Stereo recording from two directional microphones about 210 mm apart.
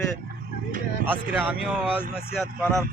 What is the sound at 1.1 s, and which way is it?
Speech, 5° right (ahead or behind).